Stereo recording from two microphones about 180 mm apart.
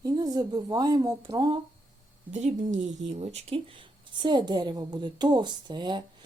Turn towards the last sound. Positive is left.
turn(degrees=-25)  # may be behind; listen again after turning